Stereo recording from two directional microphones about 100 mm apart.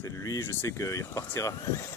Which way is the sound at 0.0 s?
35° left (ahead or behind).